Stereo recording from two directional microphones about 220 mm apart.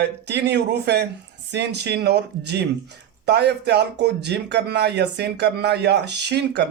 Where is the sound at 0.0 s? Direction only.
50° right (ahead or behind).